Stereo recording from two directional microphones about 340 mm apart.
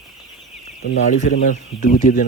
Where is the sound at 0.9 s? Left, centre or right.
Left.